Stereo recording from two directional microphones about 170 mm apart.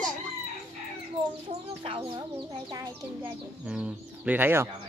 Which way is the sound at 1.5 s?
35° right (ahead or behind).